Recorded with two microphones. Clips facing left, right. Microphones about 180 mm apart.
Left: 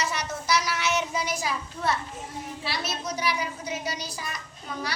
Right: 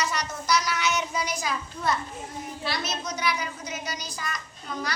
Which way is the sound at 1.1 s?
5° left (ahead or behind).